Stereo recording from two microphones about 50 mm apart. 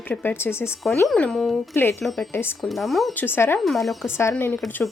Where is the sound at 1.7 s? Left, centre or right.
Left.